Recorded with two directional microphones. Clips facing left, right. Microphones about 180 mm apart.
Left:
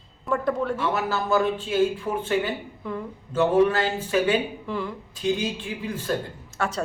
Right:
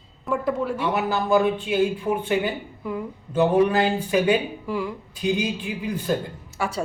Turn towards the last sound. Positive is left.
turn(degrees=-10)  # may be behind; listen again after turning